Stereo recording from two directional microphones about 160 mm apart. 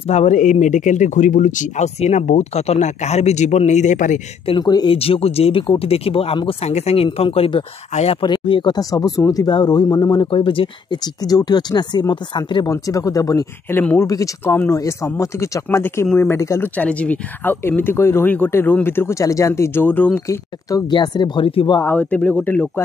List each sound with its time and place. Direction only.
0.1 s speech: 50° left (ahead or behind)
4.5 s speech: 25° left (ahead or behind)
4.9 s speech: 40° left (ahead or behind); by 20.3 s 10° left (ahead or behind)
20.7 s speech: 25° left (ahead or behind)
21.8 s speech: 10° left (ahead or behind)